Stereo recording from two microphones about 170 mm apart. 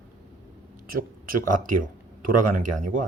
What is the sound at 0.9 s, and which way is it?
Speech, 55° right (ahead or behind).